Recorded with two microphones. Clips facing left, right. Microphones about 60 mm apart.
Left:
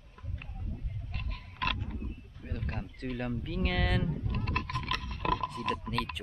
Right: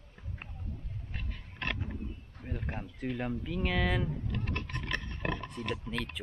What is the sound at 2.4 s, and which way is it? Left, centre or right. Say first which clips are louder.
Speech: even; centre.